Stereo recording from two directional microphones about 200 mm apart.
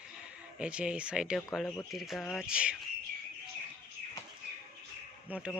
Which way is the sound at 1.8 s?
Centre (ahead or behind).